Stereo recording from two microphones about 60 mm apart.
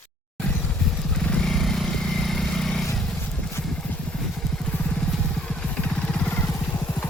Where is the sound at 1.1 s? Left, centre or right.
Centre.